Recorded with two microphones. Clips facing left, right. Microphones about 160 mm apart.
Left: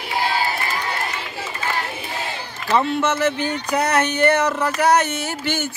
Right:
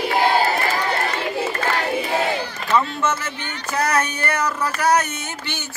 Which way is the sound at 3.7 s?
20° left (ahead or behind).